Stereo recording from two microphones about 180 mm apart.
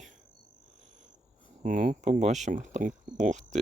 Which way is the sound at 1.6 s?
45° right (ahead or behind).